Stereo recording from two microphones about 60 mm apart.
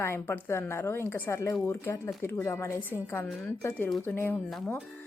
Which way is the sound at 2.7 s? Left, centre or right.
Left.